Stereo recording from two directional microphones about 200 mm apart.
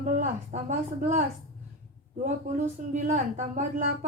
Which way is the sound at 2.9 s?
35° right (ahead or behind).